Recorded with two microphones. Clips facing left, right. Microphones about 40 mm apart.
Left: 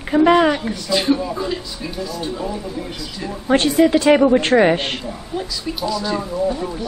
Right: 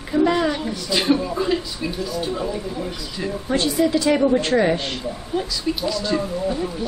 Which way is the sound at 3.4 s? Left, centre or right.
Left.